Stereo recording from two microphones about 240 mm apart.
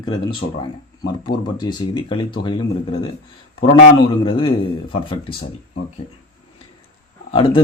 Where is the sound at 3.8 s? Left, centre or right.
Left.